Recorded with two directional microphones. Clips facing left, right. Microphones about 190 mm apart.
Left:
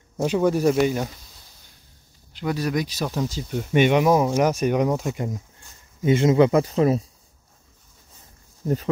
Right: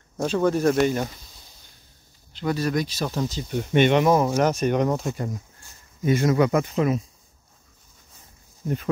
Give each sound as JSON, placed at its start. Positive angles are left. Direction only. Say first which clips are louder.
{"t": 0.2, "sound": "speech", "louder": "left 1 dB", "side_deg": 15}
{"t": 2.3, "sound": "speech", "louder": "even", "side_deg": 10}